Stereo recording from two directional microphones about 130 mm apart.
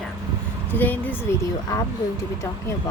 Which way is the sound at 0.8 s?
15° left (ahead or behind).